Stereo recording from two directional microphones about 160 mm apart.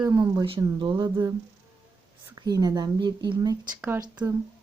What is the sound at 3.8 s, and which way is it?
Speech, 15° right (ahead or behind).